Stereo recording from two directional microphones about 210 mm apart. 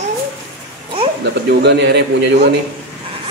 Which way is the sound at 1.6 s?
55° right (ahead or behind).